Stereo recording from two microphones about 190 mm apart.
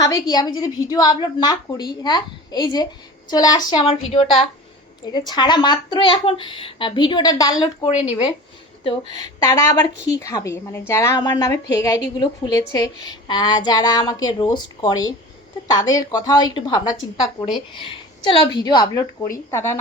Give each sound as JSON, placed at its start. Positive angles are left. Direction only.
{"t": 0.0, "sound": "a woman's voice", "side_deg": 20}